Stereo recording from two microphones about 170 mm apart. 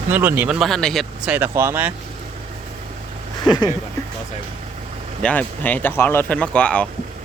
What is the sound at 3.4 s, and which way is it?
Speech, 25° left (ahead or behind).